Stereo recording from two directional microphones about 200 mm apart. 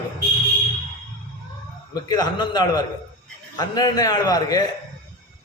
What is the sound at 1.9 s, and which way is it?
A man's voice, 20° left (ahead or behind).